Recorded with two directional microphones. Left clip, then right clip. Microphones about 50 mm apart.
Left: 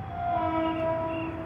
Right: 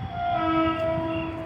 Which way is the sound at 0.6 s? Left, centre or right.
Centre.